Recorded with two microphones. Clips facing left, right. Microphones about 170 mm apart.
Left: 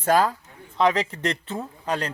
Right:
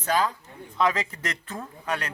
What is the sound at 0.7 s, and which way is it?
A man's voice, 30° left (ahead or behind).